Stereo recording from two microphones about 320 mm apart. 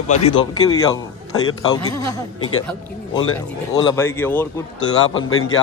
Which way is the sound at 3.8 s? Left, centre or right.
Centre.